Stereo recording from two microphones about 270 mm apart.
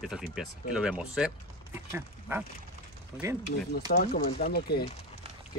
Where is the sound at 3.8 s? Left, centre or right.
Left.